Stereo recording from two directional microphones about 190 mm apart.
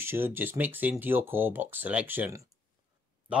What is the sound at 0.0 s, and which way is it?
Speech, 10° right (ahead or behind).